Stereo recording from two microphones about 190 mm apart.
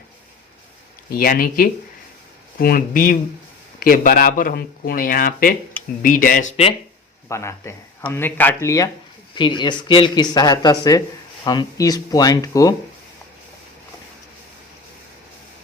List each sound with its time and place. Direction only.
1.1 s a man's voice: 50° left (ahead or behind)
7.3 s a man's voice: 15° left (ahead or behind)